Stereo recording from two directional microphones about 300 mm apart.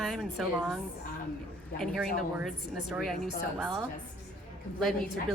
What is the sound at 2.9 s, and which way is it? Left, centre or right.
Speech, centre.